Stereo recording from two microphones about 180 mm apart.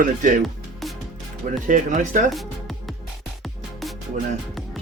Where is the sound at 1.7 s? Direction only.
45° right (ahead or behind).